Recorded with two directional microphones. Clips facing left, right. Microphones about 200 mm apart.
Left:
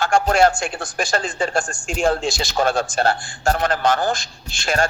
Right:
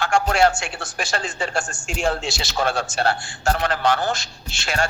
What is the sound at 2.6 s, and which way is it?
Speech, 50° left (ahead or behind).